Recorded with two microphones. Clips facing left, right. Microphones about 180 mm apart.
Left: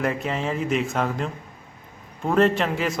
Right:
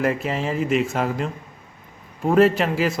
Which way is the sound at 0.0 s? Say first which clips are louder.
Right 2 dB; centre (ahead or behind).